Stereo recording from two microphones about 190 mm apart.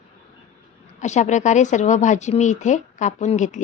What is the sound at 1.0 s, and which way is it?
A woman's voice, 40° left (ahead or behind).